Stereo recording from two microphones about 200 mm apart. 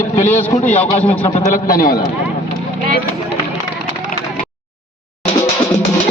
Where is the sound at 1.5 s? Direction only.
45° left (ahead or behind).